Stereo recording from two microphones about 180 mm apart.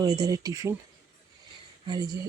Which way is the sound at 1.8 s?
20° right (ahead or behind).